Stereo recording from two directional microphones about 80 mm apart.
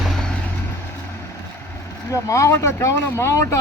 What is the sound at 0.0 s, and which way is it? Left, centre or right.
Vehicle, centre.